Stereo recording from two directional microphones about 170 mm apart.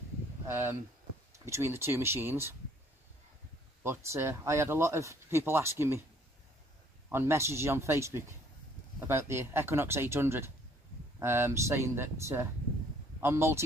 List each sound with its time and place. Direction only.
0.5 s speech: 15° right (ahead or behind)
3.8 s speech: 15° right (ahead or behind)
7.1 s speech: 15° right (ahead or behind)